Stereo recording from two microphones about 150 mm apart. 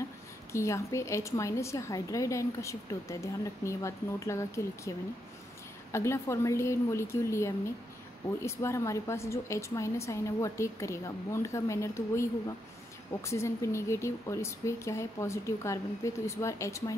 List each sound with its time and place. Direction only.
0.5 s a woman's voice: 20° left (ahead or behind)